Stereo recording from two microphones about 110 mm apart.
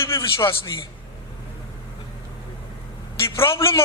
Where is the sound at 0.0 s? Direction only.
25° left (ahead or behind).